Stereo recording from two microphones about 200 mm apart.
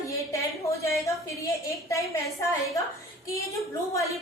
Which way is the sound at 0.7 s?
15° left (ahead or behind).